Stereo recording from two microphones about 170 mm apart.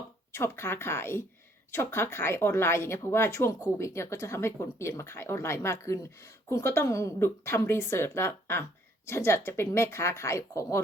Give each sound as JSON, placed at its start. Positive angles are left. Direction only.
{"t": 0.3, "sound": "speech", "side_deg": 15}